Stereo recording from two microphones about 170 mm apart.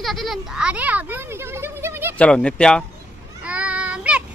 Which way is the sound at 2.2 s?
5° left (ahead or behind).